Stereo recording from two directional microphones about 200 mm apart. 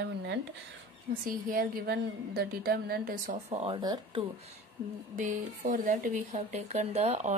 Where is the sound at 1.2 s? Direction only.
45° right (ahead or behind); by 4.2 s 20° right (ahead or behind).